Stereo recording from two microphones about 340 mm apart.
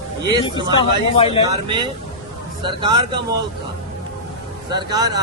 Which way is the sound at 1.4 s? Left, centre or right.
Centre.